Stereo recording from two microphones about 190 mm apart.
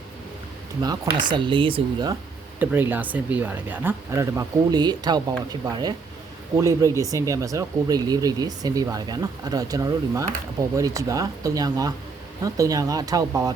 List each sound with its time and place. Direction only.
0.8 s speech: 20° right (ahead or behind)
2.6 s speech: 10° right (ahead or behind)